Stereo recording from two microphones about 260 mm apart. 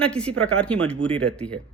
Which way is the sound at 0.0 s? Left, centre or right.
Centre.